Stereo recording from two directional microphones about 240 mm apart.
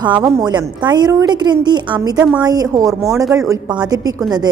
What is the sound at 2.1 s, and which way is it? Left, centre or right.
Speech, centre.